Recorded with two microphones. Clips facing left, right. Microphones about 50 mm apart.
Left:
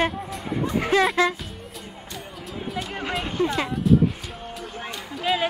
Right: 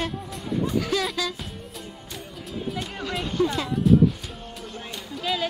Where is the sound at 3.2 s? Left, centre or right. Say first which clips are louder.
Right 2 dB; left.